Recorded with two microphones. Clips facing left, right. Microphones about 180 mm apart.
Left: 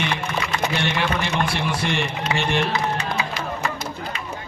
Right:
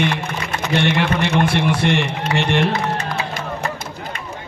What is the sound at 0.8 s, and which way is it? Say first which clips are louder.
Speech: right 10 dB; 65° right (ahead or behind).